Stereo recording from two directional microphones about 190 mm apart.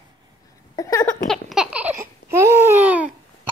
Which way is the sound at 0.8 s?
15° left (ahead or behind).